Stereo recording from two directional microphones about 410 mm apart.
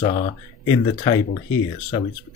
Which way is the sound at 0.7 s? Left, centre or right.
Centre.